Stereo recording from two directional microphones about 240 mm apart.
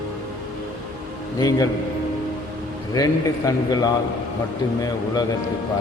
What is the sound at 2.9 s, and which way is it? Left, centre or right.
A man's voice, centre.